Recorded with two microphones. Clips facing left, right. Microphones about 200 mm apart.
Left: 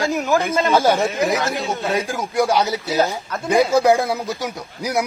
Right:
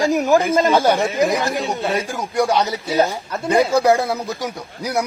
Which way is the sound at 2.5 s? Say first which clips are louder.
Right 1 dB; 10° left (ahead or behind).